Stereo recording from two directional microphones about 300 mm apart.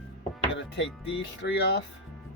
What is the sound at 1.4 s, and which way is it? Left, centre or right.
Speech, left.